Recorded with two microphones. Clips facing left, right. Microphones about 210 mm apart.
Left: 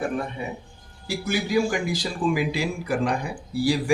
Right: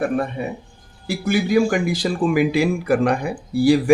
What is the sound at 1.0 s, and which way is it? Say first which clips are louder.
A man's voice: right 6 dB; 55° right (ahead or behind).